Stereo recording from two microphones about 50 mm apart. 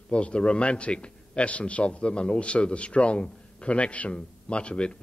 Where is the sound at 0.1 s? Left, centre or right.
Left.